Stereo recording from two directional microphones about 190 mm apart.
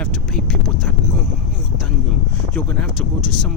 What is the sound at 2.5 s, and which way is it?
Speech, 5° left (ahead or behind).